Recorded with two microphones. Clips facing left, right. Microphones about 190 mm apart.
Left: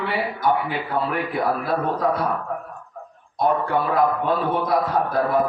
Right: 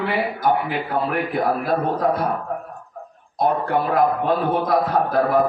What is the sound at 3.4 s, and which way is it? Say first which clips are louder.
A man's voice: right 1 dB; 45° right (ahead or behind).